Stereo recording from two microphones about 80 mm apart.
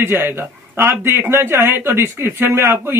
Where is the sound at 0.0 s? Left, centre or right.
Right.